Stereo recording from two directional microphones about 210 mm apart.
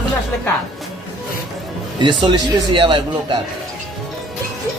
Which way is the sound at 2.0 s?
20° right (ahead or behind).